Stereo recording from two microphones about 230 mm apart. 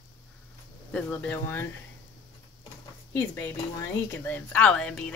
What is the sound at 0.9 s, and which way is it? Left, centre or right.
Speech, centre.